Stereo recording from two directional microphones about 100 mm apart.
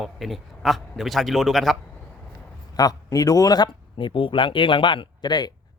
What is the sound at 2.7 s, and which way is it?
Speech, 40° left (ahead or behind).